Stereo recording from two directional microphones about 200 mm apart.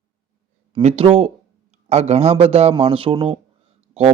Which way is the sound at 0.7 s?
30° right (ahead or behind).